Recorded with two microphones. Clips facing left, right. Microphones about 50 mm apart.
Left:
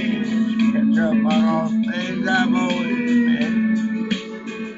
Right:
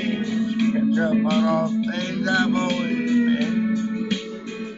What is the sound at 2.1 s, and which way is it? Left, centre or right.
Music, centre.